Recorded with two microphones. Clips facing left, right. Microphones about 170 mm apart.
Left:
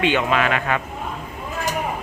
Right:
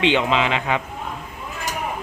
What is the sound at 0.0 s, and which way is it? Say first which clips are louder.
Speech: even; 20° right (ahead or behind).